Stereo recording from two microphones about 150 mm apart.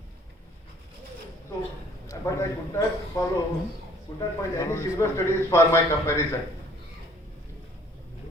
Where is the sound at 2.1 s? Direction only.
20° left (ahead or behind).